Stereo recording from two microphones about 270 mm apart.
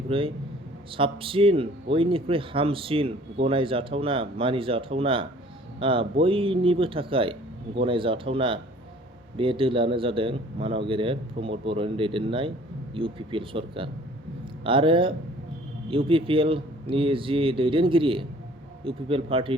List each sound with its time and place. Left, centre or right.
0.1 s speech: centre